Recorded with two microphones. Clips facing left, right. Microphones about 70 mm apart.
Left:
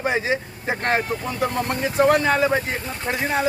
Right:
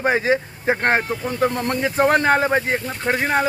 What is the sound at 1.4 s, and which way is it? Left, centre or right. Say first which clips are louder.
Speech: right 3 dB; right.